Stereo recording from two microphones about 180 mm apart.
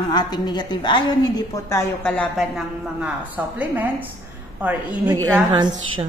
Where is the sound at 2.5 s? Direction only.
10° right (ahead or behind).